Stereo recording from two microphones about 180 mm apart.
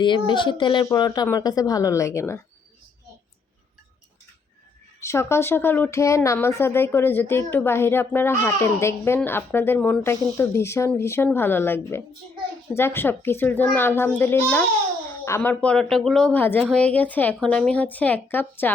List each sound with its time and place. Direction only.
0.0 s speech: 25° left (ahead or behind)
4.9 s speech: 15° left (ahead or behind)